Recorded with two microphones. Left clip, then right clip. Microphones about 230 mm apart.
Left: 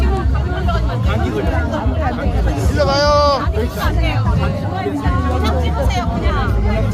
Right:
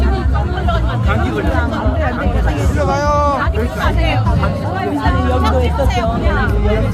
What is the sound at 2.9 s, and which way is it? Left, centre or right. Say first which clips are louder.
Vehicle: left 2 dB; left.